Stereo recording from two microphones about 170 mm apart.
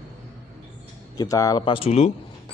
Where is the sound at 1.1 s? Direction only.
20° left (ahead or behind).